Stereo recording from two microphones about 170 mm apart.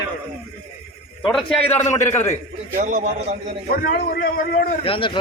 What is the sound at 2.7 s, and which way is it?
Speech, 55° right (ahead or behind).